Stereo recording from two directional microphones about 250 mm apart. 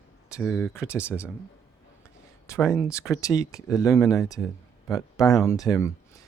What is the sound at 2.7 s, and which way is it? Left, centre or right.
Speech, centre.